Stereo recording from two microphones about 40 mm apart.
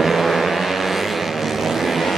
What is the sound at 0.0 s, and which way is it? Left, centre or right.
Vehicle, centre.